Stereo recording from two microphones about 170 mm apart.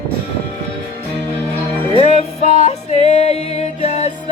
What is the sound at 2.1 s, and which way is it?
Music, 40° left (ahead or behind).